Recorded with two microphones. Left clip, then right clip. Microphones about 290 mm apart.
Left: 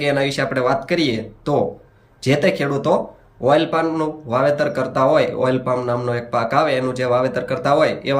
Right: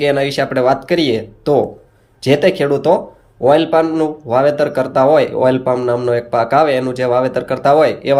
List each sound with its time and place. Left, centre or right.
0.0 s a man's voice: centre